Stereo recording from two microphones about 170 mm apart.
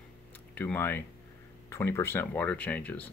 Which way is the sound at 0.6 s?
10° left (ahead or behind).